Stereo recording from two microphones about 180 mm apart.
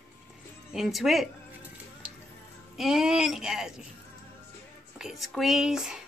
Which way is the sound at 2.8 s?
5° right (ahead or behind).